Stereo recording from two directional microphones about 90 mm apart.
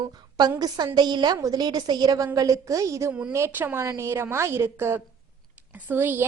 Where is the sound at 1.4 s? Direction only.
45° right (ahead or behind).